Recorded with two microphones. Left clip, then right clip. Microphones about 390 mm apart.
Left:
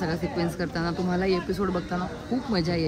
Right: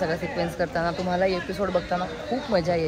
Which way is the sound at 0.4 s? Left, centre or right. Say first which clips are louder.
Right 4 dB; centre.